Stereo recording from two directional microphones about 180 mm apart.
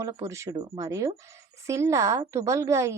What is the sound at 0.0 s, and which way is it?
A woman's voice, 15° right (ahead or behind).